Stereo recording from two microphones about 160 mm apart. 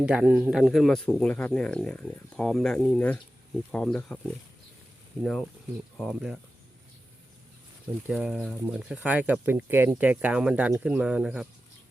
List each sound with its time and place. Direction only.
0.0 s speech: 5° right (ahead or behind)
0.6 s speech: centre (ahead or behind)
5.2 s speech: 5° left (ahead or behind)
8.0 s speech: 5° right (ahead or behind)